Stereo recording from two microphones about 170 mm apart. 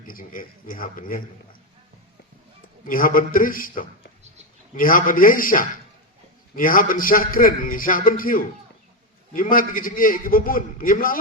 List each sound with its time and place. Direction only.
0.1 s a man's voice: 55° left (ahead or behind)
2.8 s a man's voice: 55° left (ahead or behind)